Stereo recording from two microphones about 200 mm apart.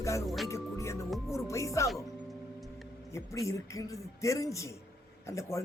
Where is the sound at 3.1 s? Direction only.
15° left (ahead or behind).